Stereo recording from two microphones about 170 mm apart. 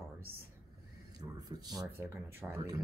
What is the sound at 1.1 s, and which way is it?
Speech, 25° right (ahead or behind).